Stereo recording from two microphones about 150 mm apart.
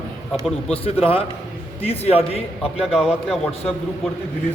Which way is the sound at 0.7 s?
40° left (ahead or behind).